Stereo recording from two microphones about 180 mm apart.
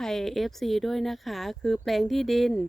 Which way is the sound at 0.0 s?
Centre (ahead or behind).